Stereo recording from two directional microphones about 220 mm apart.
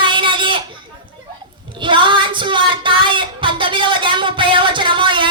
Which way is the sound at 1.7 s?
20° right (ahead or behind).